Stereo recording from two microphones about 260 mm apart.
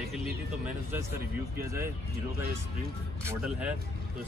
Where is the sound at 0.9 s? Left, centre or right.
Centre.